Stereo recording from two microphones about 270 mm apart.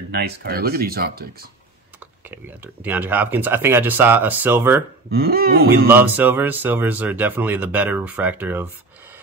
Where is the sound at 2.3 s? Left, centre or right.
Centre.